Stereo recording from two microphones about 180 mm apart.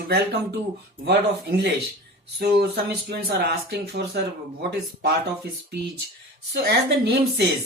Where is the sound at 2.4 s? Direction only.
65° right (ahead or behind).